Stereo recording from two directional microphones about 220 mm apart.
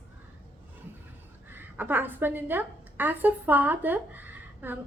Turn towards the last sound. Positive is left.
turn(degrees=-10)  # may be behind; listen again after turning